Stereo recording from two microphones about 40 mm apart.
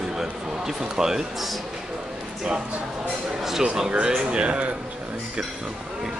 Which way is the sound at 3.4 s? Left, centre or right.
Centre.